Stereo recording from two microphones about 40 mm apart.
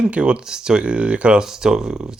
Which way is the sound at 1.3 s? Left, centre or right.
Centre.